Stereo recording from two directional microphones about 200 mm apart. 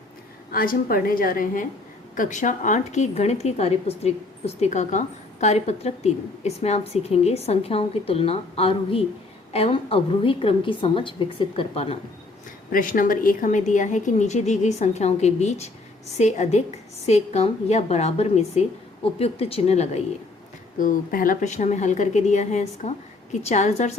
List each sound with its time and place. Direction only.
0.5 s a woman's voice: 45° left (ahead or behind); by 11.9 s 30° left (ahead or behind)
12.7 s a woman's voice: 45° left (ahead or behind)